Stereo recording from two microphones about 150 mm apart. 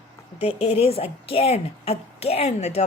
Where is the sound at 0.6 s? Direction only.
45° left (ahead or behind).